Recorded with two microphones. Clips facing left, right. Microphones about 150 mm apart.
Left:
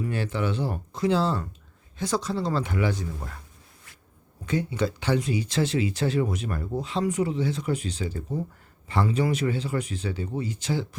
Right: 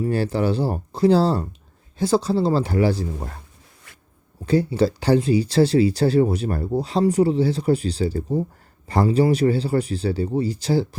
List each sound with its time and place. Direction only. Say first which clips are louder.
0.0 s speech: right 7 dB; 35° right (ahead or behind)
4.4 s speech: right 8 dB; 35° right (ahead or behind)